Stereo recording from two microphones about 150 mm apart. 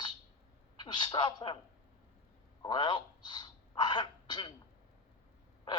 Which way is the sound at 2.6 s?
30° left (ahead or behind).